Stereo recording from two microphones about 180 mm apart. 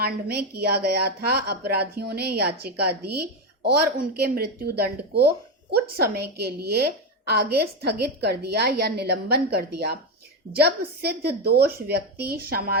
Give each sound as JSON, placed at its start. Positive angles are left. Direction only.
{"t": 0.0, "sound": "a woman's voice", "side_deg": -60}